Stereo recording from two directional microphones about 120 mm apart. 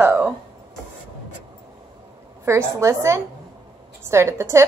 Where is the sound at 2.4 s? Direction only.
25° right (ahead or behind).